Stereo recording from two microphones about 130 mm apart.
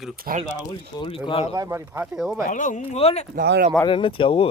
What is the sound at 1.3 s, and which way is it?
Speech, 50° left (ahead or behind).